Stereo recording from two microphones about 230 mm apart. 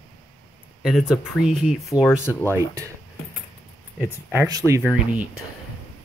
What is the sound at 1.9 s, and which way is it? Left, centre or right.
Speech, centre.